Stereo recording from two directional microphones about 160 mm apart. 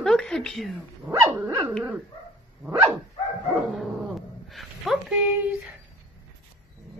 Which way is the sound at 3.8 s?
Centre (ahead or behind).